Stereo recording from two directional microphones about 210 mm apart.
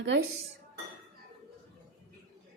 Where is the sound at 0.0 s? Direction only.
55° right (ahead or behind).